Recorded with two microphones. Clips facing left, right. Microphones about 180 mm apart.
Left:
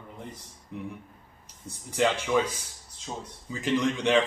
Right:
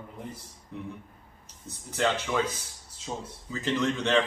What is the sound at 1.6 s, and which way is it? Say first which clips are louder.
A man's voice: left 2 dB; 10° left (ahead or behind).